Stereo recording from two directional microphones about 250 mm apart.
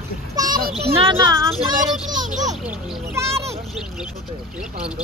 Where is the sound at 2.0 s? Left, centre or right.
Right.